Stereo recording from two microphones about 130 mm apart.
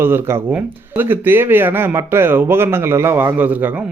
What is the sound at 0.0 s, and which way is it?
A man's voice, 20° right (ahead or behind).